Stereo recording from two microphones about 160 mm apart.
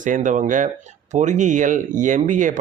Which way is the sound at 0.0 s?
55° right (ahead or behind).